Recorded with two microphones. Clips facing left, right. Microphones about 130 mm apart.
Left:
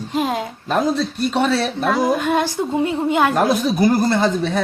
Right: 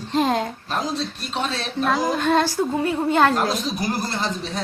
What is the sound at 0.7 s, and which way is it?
Speech, 55° left (ahead or behind).